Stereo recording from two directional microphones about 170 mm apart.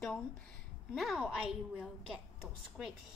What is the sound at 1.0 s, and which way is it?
A woman's voice, centre (ahead or behind).